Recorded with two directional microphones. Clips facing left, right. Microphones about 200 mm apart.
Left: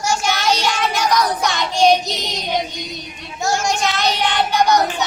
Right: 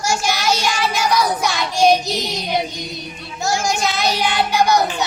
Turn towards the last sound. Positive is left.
turn(degrees=-5)  # may be behind; listen again after turning